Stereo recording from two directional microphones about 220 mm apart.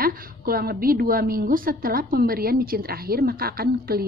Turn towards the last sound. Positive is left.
turn(degrees=-45)  # may be behind; listen again after turning